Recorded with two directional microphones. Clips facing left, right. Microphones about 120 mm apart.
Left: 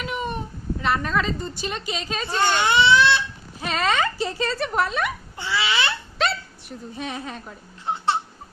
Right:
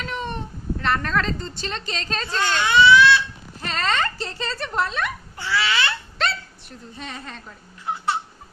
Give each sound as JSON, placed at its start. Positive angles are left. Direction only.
{"t": 0.0, "sound": "speech", "side_deg": 10}
{"t": 2.7, "sound": "crying", "side_deg": 25}
{"t": 3.6, "sound": "speech", "side_deg": 5}
{"t": 5.4, "sound": "speech", "side_deg": 15}
{"t": 6.2, "sound": "a sound", "side_deg": 5}
{"t": 6.9, "sound": "speech", "side_deg": 10}
{"t": 7.9, "sound": "a sound", "side_deg": 25}